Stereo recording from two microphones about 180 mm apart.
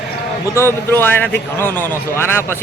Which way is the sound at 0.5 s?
15° left (ahead or behind).